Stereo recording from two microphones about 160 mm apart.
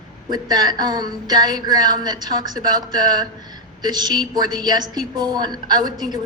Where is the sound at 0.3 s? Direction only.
25° right (ahead or behind).